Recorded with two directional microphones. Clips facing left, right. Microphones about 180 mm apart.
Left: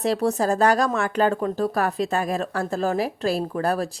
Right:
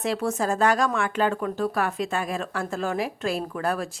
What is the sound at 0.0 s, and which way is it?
Speech, 35° left (ahead or behind).